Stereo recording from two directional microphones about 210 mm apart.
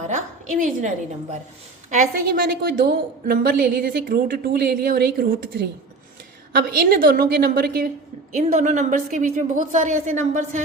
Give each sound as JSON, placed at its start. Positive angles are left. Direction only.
{"t": 0.1, "sound": "a sound", "side_deg": -35}
{"t": 1.9, "sound": "a woman's voice", "side_deg": -40}
{"t": 6.6, "sound": "a woman's voice", "side_deg": -45}